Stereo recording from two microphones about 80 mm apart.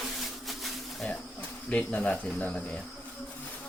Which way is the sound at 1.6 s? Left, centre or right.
Centre.